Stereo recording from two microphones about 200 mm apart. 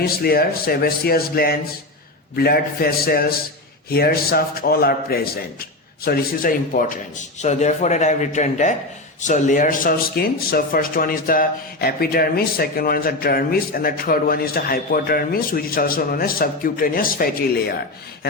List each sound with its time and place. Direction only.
0.0 s a man's voice: 50° left (ahead or behind)